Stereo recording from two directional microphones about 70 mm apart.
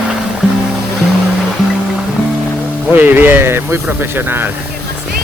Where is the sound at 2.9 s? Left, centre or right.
Right.